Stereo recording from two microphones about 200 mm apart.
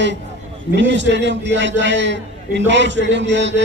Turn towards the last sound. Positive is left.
turn(degrees=-60)  # may be behind; listen again after turning